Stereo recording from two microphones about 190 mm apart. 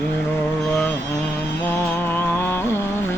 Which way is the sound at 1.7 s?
10° left (ahead or behind).